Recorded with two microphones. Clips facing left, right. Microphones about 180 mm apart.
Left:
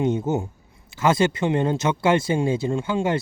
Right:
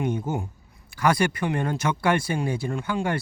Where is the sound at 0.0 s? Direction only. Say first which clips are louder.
Left 5 dB; 25° left (ahead or behind).